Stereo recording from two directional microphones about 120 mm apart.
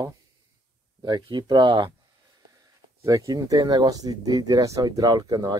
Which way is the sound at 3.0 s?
30° right (ahead or behind).